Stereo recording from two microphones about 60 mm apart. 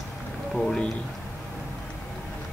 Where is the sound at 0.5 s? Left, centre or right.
Centre.